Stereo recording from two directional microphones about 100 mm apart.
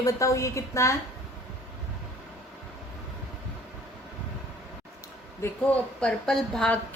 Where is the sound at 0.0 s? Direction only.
30° left (ahead or behind).